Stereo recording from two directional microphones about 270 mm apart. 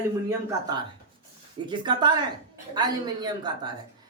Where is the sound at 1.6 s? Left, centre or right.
Centre.